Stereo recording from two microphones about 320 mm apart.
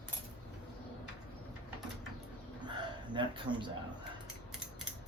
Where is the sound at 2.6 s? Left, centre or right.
Centre.